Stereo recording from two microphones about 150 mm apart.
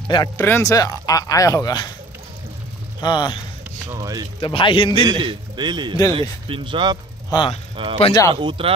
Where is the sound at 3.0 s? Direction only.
30° left (ahead or behind).